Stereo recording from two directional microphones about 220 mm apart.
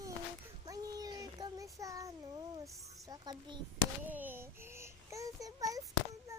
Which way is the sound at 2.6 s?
15° right (ahead or behind).